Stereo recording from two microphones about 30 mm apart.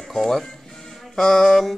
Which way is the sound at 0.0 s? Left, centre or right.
Centre.